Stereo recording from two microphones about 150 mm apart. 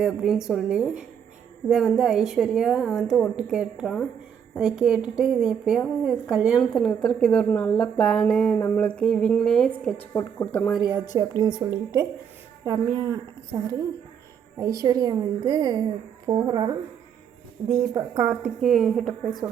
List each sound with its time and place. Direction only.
0.0 s a woman's voice: 5° right (ahead or behind); by 10.7 s 10° left (ahead or behind)
10.8 s speech: 5° right (ahead or behind)
11.2 s a woman's voice: 25° right (ahead or behind)
12.6 s a woman's voice: 25° right (ahead or behind)
17.6 s a woman's voice: 40° right (ahead or behind)
17.9 s a woman's voice: 20° right (ahead or behind)
18.3 s a woman's voice: 5° right (ahead or behind)